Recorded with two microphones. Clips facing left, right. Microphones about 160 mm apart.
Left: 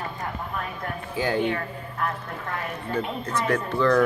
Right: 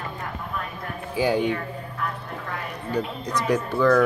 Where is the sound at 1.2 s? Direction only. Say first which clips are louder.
Right 3 dB; 15° right (ahead or behind).